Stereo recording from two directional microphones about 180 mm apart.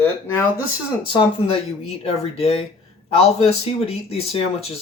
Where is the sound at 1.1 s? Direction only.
25° left (ahead or behind).